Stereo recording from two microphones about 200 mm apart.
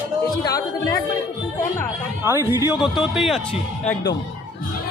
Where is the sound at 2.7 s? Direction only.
Centre (ahead or behind).